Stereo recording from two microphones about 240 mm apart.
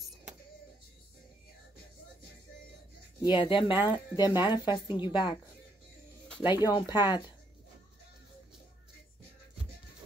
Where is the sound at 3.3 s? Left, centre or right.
Left.